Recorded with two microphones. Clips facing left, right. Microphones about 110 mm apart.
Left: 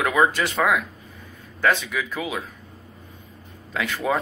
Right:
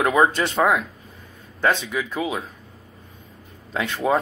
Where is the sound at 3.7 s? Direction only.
25° right (ahead or behind).